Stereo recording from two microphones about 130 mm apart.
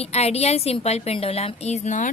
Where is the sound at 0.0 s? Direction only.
55° left (ahead or behind).